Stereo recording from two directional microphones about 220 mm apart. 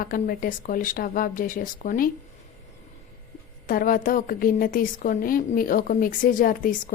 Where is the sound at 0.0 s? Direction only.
40° left (ahead or behind).